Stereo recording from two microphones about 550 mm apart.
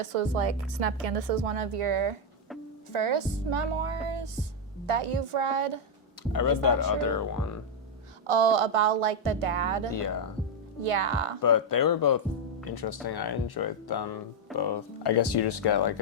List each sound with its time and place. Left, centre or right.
0.0 s a woman's voice: right
6.3 s speech: left
8.3 s speech: right
11.4 s speech: left